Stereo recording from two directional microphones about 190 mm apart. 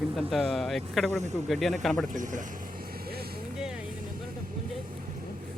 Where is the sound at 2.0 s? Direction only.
40° right (ahead or behind).